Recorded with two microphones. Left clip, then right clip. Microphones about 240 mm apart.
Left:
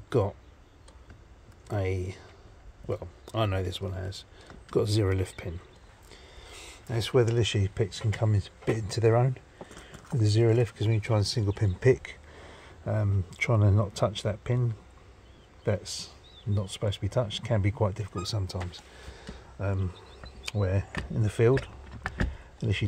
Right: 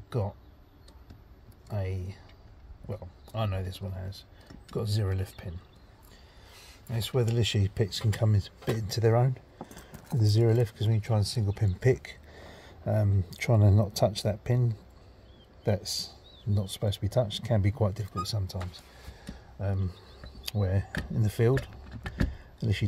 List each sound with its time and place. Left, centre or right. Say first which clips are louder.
1.7 s speech: left 7 dB; left
6.4 s a sound: left 6 dB; left
7.2 s speech: left 2 dB; centre
16.5 s speech: left 1 dB; centre
18.2 s speech: even; centre
19.6 s speech: left 3 dB; centre
22.1 s a sound: left 1 dB; centre